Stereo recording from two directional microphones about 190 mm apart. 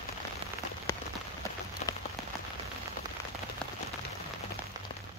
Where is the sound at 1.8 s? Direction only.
35° left (ahead or behind).